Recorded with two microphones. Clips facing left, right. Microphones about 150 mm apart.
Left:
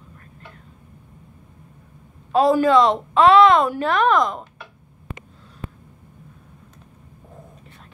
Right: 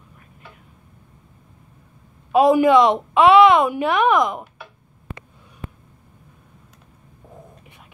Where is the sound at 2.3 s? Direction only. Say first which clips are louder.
Right 2 dB; 15° right (ahead or behind).